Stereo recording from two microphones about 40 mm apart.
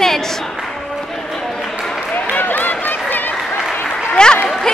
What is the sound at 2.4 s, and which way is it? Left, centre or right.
Run, left.